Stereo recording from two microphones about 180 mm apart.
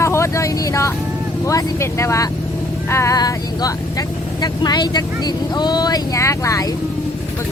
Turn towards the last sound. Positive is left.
turn(degrees=15)  # may be behind; listen again after turning